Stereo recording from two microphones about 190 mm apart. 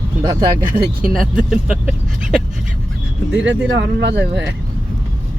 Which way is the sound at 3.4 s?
70° right (ahead or behind).